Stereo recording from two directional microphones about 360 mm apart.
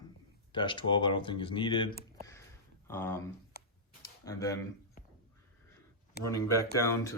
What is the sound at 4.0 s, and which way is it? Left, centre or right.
Tick-tock, centre.